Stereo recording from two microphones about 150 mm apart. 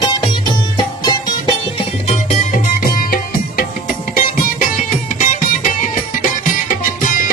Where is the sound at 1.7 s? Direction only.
45° left (ahead or behind).